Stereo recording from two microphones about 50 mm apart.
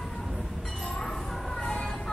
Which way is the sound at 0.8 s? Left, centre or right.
Centre.